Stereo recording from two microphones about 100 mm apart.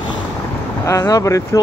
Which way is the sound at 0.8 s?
35° left (ahead or behind).